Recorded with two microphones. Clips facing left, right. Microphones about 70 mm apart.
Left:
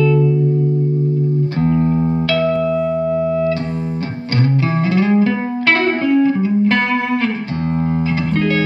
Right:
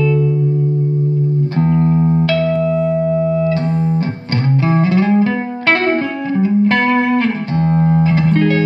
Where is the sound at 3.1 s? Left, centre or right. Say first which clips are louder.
Right 1 dB; right.